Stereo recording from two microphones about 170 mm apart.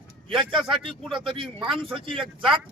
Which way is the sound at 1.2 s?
30° right (ahead or behind).